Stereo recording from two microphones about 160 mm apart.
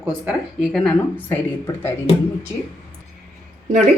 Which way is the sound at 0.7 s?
10° left (ahead or behind).